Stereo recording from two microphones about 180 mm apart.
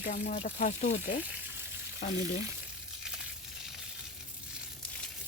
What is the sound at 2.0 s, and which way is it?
Speech, 50° left (ahead or behind).